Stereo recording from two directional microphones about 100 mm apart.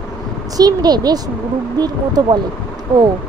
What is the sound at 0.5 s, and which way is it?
Speech, 40° right (ahead or behind).